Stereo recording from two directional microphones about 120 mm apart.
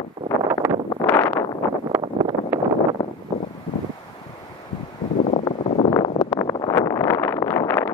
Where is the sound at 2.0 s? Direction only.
40° right (ahead or behind).